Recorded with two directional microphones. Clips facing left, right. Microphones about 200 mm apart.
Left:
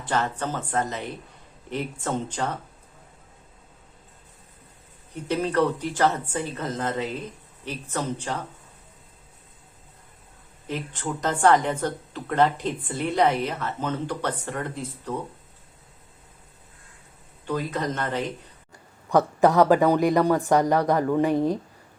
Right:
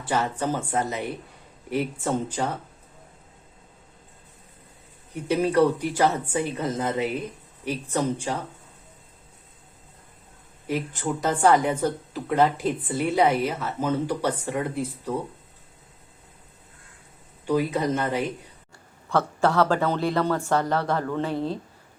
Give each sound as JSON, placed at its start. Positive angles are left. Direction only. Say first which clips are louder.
{"t": 0.0, "sound": "a woman's voice", "louder": "right 1 dB", "side_deg": -10}
{"t": 5.1, "sound": "a woman's voice", "louder": "right 3 dB", "side_deg": -10}
{"t": 10.7, "sound": "a woman's voice", "louder": "right 3 dB", "side_deg": -10}
{"t": 17.4, "sound": "a woman's voice", "louder": "right 4 dB", "side_deg": -10}
{"t": 19.0, "sound": "speech", "louder": "left 4 dB", "side_deg": 15}